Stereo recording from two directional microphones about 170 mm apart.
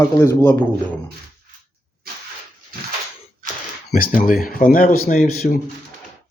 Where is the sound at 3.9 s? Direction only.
55° left (ahead or behind).